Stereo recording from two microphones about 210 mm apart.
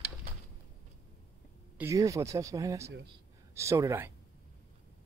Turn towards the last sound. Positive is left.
turn(degrees=-10)  # may be behind; listen again after turning